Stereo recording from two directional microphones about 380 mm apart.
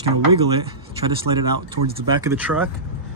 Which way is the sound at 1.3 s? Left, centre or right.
Right.